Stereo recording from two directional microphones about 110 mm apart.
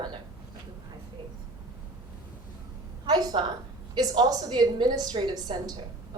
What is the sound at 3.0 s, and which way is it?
A woman's voice, 40° right (ahead or behind).